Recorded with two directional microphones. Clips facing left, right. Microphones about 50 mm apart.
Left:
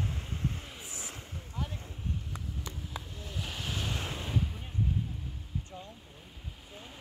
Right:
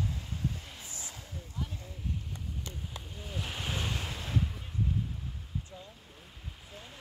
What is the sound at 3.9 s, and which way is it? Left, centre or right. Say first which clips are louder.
Waves: even; centre.